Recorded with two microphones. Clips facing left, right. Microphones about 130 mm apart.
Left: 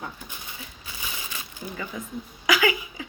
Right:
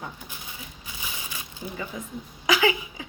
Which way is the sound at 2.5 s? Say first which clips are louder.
Even; 25° right (ahead or behind).